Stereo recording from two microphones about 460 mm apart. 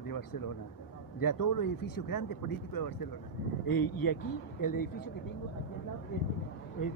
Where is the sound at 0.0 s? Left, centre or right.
Left.